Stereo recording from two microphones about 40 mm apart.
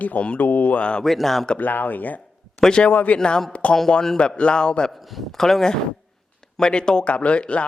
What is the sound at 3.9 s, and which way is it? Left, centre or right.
A man's voice, centre.